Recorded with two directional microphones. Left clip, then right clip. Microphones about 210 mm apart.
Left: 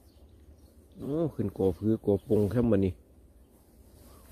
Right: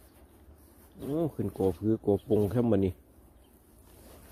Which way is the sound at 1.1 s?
5° left (ahead or behind).